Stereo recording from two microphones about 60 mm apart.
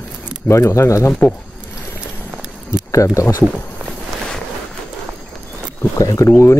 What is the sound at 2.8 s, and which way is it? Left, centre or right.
Speech, left.